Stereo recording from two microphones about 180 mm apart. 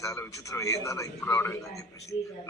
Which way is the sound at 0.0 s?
15° left (ahead or behind).